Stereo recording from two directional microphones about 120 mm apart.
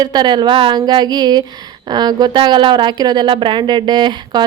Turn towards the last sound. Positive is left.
turn(degrees=-40)  # may be behind; listen again after turning